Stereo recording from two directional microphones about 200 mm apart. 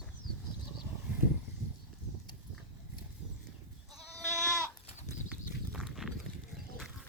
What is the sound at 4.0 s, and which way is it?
Goat, 15° right (ahead or behind).